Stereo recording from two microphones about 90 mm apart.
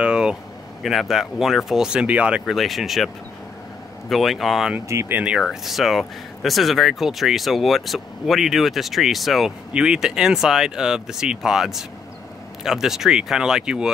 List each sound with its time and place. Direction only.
0.0 s air conditioning: 10° right (ahead or behind)
0.8 s speech: centre (ahead or behind)
2.4 s speech: centre (ahead or behind)
4.1 s speech: centre (ahead or behind)
4.8 s speech: 35° right (ahead or behind)
5.1 s speech: 10° right (ahead or behind)